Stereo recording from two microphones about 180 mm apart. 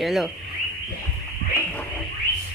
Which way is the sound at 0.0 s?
Centre (ahead or behind).